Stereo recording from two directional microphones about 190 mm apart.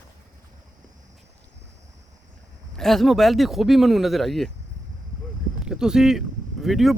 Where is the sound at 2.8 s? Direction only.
Centre (ahead or behind).